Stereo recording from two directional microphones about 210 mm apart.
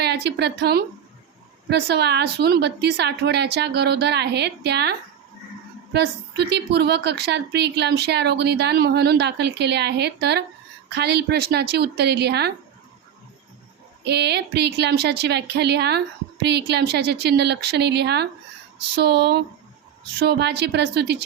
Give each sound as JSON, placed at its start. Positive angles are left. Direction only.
{"t": 0.0, "sound": "a woman's voice", "side_deg": -50}
{"t": 14.0, "sound": "a woman's voice", "side_deg": -50}